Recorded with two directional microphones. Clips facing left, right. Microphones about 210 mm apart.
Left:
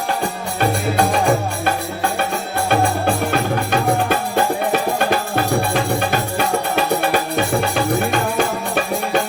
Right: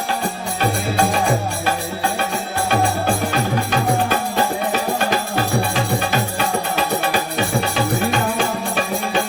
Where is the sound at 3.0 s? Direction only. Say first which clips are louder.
Left 1 dB; 55° left (ahead or behind).